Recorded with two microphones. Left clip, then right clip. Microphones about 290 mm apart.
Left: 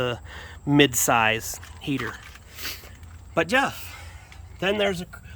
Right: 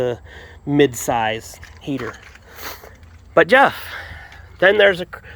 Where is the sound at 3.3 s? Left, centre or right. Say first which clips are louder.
Right 10 dB; centre.